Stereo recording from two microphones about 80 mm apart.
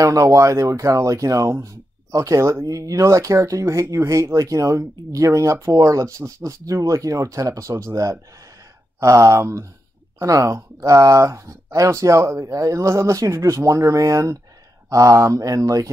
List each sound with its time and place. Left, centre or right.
0.0 s speech: right